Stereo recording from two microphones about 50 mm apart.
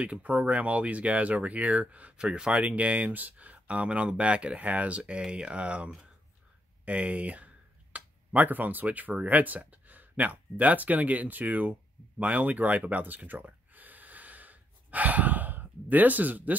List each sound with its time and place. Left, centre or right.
0.0 s speech: right
6.8 s a sound: right
9.2 s speech: right
12.2 s gasp: right